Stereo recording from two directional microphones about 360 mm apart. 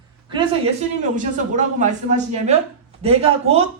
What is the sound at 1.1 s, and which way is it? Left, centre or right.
A woman's voice, right.